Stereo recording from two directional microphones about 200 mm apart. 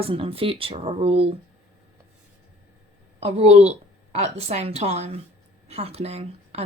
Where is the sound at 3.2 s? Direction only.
30° right (ahead or behind).